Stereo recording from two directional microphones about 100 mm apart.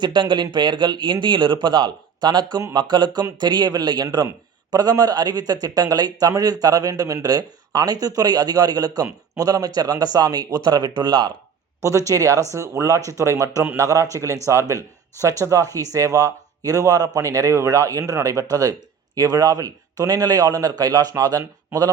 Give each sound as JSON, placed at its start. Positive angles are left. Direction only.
{"t": 0.0, "sound": "speech", "side_deg": -50}
{"t": 11.8, "sound": "speech", "side_deg": -30}